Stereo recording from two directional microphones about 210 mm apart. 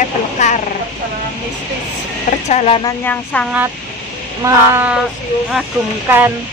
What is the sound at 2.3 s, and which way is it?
Speech, 30° left (ahead or behind).